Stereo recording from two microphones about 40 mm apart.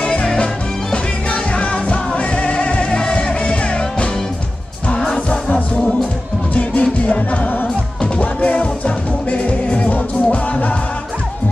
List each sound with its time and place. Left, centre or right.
0.0 s music: left
5.3 s music: left